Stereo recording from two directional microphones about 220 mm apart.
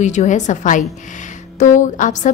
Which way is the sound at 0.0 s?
35° left (ahead or behind).